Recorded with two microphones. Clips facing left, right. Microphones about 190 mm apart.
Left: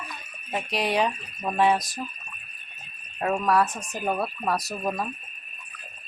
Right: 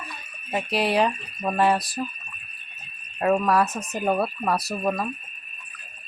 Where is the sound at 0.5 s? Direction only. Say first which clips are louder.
Right 3 dB; 5° right (ahead or behind).